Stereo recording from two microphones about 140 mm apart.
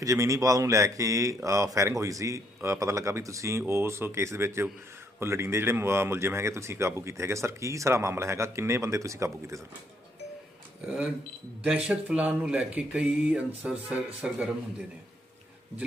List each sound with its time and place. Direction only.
0.0 s speech: 20° right (ahead or behind)
10.8 s speech: 5° right (ahead or behind)